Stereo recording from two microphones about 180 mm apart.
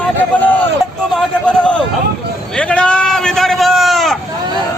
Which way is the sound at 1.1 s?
5° left (ahead or behind).